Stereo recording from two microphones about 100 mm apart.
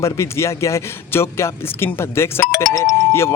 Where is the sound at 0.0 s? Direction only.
30° left (ahead or behind).